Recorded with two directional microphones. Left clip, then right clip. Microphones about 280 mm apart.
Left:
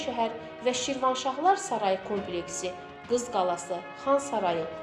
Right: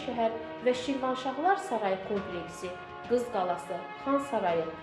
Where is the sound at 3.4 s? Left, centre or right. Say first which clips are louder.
Left 3 dB; left.